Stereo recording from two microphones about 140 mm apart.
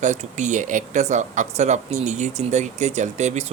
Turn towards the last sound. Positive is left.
turn(degrees=-55)  # may be behind; listen again after turning